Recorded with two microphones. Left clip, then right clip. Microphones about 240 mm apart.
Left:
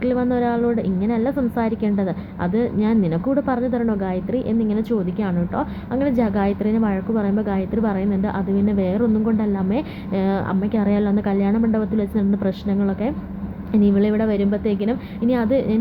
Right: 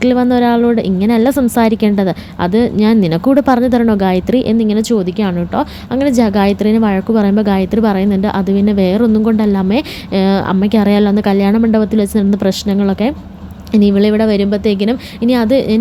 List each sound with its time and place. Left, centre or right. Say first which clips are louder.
0.0 s a woman's voice: right 8 dB; right